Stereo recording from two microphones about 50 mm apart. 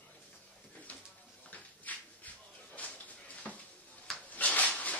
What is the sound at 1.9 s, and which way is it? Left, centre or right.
Shuffle, left.